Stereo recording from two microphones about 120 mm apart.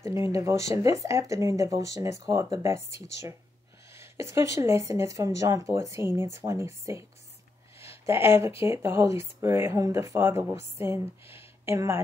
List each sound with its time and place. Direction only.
0.0 s speech: 25° right (ahead or behind)